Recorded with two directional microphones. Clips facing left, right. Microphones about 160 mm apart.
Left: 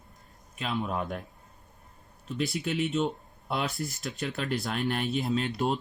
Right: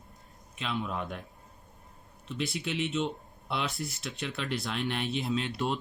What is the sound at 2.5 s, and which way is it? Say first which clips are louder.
Speech: left 3 dB; 45° left (ahead or behind).